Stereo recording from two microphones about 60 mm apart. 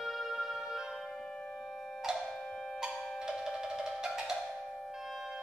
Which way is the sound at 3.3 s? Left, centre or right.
Centre.